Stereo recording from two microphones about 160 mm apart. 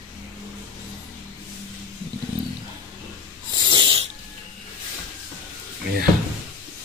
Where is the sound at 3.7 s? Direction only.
30° right (ahead or behind).